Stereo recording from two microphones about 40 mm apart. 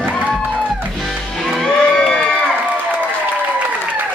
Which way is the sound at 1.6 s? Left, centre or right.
Centre.